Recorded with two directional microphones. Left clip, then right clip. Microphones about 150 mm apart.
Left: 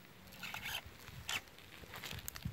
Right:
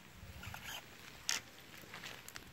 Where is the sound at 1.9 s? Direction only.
25° left (ahead or behind).